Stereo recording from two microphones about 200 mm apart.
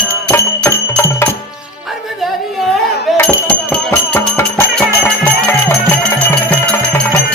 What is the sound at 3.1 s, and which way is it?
Music, 5° left (ahead or behind).